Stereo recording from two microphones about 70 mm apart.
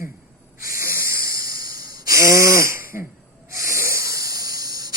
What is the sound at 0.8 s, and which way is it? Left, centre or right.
Hiss, right.